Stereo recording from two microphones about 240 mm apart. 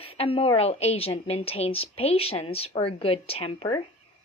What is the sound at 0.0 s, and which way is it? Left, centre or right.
A woman's voice, left.